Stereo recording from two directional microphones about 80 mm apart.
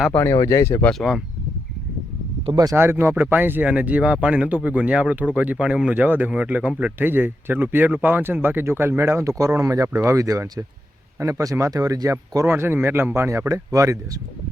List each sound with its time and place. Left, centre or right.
0.3 s speech: left
0.9 s speech: centre
2.7 s speech: right
7.0 s speech: right
12.5 s speech: right